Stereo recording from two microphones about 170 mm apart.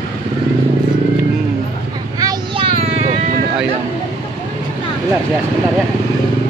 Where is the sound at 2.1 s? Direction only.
25° right (ahead or behind).